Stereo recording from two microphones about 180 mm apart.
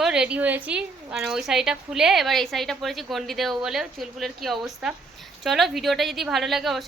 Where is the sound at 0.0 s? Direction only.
5° right (ahead or behind).